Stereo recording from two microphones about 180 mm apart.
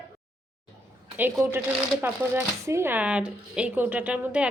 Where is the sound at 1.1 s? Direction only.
10° right (ahead or behind).